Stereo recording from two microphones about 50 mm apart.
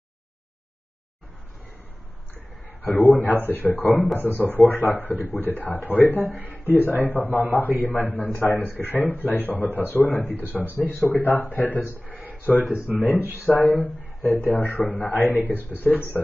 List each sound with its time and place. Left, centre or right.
2.8 s speech: left
6.3 s speech: right
7.1 s speech: left